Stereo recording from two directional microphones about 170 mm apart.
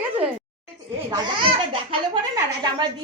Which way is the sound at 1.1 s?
30° right (ahead or behind).